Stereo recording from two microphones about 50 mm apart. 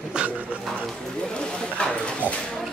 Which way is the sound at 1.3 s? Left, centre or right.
Centre.